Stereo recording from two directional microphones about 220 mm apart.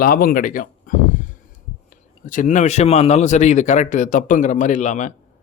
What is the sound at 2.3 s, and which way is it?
Speech, 35° left (ahead or behind).